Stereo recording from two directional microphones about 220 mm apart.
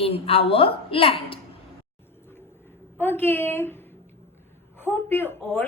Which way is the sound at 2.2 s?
10° left (ahead or behind).